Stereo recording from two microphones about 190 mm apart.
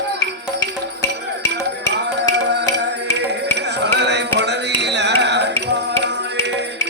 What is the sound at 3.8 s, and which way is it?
Music, 65° right (ahead or behind).